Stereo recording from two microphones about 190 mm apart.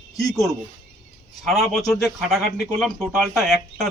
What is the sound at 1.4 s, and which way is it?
Speech, centre (ahead or behind).